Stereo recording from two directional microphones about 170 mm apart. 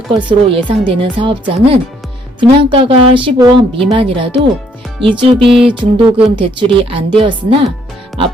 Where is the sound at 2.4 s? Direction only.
30° right (ahead or behind).